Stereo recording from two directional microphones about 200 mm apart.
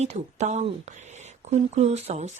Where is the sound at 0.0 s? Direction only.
35° right (ahead or behind).